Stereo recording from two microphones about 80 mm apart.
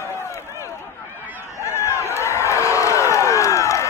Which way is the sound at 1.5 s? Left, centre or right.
Left.